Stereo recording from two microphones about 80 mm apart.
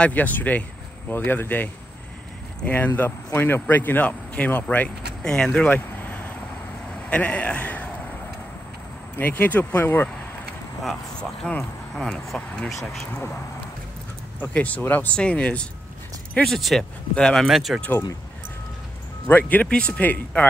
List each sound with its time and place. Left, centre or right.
0.0 s speech: centre
5.7 s vehicle: left
7.1 s a man's voice: centre
9.2 s speech: left
11.1 s speech: centre
14.4 s speech: centre
16.4 s speech: centre
17.5 s speech: centre
19.2 s speech: left